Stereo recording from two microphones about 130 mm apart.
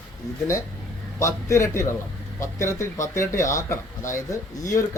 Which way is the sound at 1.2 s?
25° left (ahead or behind).